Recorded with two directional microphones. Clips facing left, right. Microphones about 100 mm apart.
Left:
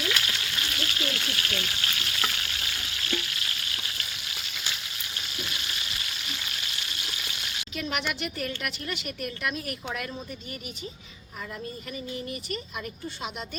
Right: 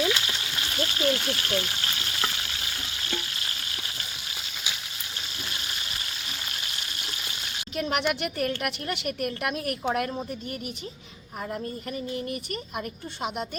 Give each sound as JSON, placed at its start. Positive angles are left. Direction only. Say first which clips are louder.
{"t": 0.0, "sound": "frying", "louder": "right 4 dB", "side_deg": -25}
{"t": 7.8, "sound": "a woman's voice", "louder": "right 5 dB", "side_deg": -50}
{"t": 12.1, "sound": "a woman's voice", "louder": "right 3 dB", "side_deg": -50}